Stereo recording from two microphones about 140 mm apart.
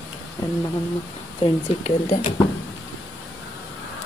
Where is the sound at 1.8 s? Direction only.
65° left (ahead or behind).